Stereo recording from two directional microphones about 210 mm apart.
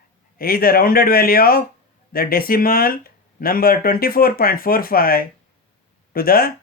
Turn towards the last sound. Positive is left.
turn(degrees=45)  # may be behind; listen again after turning